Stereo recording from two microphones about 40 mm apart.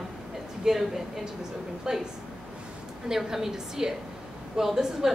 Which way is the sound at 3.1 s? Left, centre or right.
Centre.